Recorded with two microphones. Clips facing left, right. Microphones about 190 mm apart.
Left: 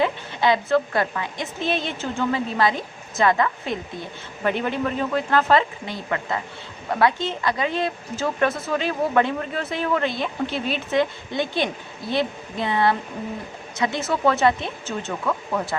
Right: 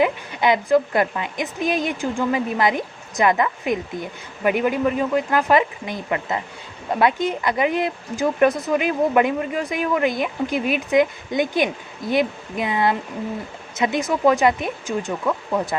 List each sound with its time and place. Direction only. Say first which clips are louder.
0.0 s speech: right 2 dB; 20° right (ahead or behind)
1.7 s a woman's voice: right 3 dB; 30° left (ahead or behind)
2.0 s speech: right 2 dB; 15° right (ahead or behind)